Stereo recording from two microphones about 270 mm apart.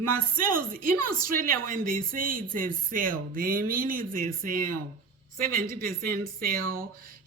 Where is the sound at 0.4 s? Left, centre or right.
Right.